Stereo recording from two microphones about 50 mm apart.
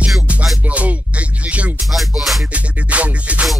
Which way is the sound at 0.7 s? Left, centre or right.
Right.